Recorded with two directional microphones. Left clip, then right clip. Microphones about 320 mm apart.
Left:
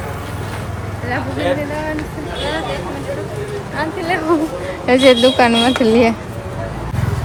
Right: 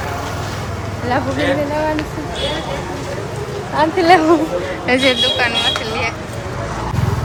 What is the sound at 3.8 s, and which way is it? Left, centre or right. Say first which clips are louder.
Speech: right 9 dB; centre.